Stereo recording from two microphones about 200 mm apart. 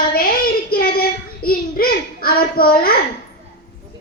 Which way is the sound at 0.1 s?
50° left (ahead or behind).